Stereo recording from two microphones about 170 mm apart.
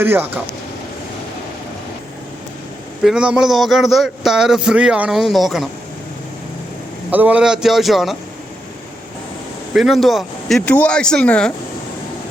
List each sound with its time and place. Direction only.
0.0 s speech: 10° right (ahead or behind)
3.0 s a man's voice: 5° right (ahead or behind)
7.1 s a man's voice: 10° right (ahead or behind)
9.7 s a man's voice: centre (ahead or behind)